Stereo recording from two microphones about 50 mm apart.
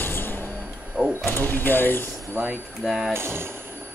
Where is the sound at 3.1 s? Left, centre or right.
Right.